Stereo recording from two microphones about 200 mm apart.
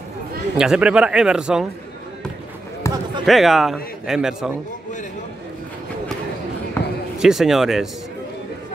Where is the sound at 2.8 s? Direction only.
15° left (ahead or behind).